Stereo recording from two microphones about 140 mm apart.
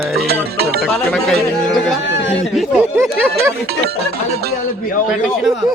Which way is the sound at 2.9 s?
20° right (ahead or behind).